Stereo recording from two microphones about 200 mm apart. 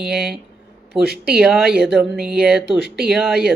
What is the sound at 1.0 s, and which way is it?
Speech, 55° right (ahead or behind).